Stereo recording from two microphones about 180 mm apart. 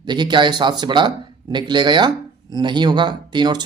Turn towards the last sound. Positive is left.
turn(degrees=-25)  # may be behind; listen again after turning